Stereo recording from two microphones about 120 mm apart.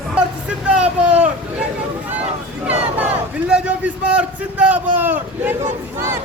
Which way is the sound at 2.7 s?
10° right (ahead or behind).